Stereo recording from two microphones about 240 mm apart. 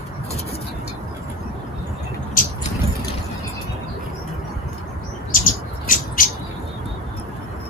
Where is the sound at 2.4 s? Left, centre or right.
Left.